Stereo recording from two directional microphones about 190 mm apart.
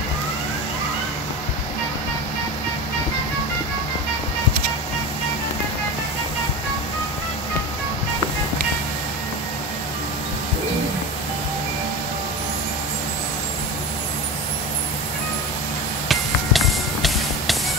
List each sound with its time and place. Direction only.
16.1 s music: centre (ahead or behind)